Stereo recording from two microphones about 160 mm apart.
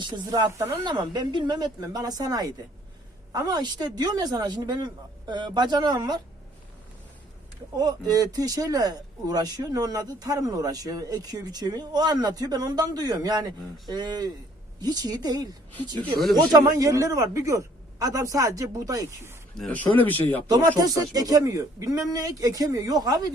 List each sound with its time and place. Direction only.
0.0 s speech: 25° right (ahead or behind)
7.8 s speech: 25° right (ahead or behind)
19.5 s speech: 5° left (ahead or behind)
20.5 s speech: 20° right (ahead or behind)